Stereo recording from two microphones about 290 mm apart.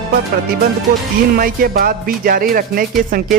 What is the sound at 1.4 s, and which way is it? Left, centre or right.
Speech, right.